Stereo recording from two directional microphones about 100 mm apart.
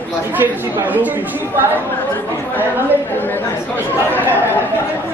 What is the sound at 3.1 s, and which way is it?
Speech, 20° left (ahead or behind).